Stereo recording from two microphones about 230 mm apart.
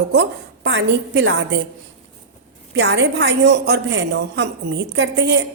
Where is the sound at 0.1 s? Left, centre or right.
Right.